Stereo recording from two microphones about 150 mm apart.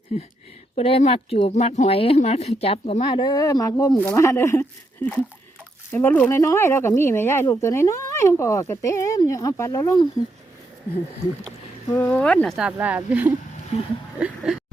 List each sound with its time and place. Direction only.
0.8 s speech: 40° left (ahead or behind); by 10.1 s 25° left (ahead or behind)
11.9 s speech: 10° left (ahead or behind)
12.5 s speech: 10° right (ahead or behind)
14.2 s a sound: 5° right (ahead or behind)